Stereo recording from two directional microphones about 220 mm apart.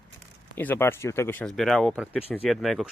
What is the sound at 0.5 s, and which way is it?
Speech, 10° left (ahead or behind).